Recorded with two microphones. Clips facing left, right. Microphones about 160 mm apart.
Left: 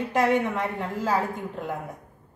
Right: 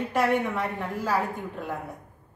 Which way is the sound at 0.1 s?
15° left (ahead or behind).